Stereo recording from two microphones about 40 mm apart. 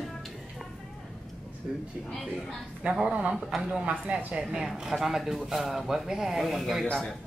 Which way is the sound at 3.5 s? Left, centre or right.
Centre.